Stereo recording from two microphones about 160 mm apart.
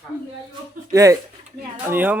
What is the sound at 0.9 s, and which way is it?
Speech, 20° right (ahead or behind).